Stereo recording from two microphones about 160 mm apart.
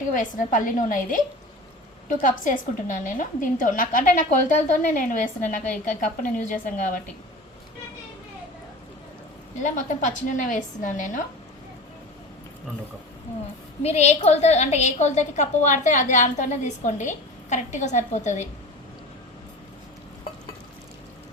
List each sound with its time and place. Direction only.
0.1 s a woman's voice: 55° left (ahead or behind)
9.6 s a woman's voice: 50° left (ahead or behind)
13.8 s a woman's voice: 45° left (ahead or behind)